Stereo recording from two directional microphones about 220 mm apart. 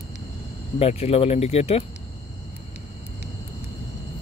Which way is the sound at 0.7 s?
25° left (ahead or behind).